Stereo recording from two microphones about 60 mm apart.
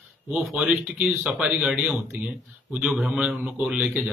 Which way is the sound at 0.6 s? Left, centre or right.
Right.